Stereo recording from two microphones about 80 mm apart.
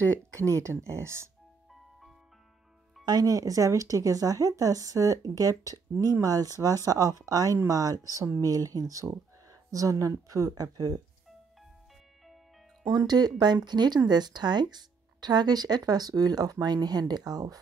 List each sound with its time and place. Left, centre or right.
0.3 s speech: right
3.1 s speech: right
12.9 s speech: right